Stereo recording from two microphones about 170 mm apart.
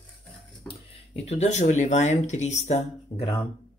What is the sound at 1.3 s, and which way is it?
Speech, 40° left (ahead or behind).